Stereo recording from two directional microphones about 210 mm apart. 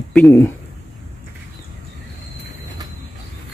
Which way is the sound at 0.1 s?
10° left (ahead or behind).